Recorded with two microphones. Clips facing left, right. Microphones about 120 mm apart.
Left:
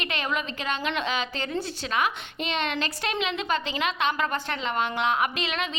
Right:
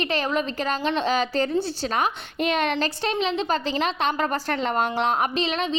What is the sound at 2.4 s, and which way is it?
A woman's voice, 45° right (ahead or behind).